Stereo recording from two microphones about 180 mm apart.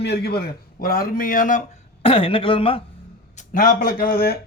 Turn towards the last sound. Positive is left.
turn(degrees=60)  # may be behind; listen again after turning